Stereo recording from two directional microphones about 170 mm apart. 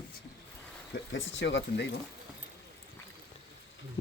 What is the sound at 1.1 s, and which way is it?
Speech, 90° left.